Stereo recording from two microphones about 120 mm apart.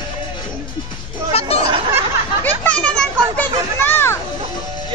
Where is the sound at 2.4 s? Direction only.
10° left (ahead or behind).